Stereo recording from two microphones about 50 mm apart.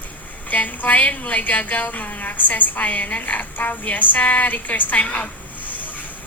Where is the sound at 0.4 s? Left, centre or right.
Left.